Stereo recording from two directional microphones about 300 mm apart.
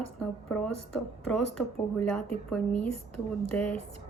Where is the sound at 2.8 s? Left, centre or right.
Left.